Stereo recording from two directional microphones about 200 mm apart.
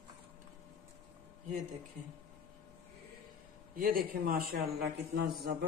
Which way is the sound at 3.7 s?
45° right (ahead or behind).